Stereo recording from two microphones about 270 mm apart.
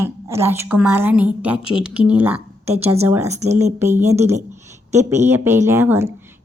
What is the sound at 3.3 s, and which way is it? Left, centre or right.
Speech, right.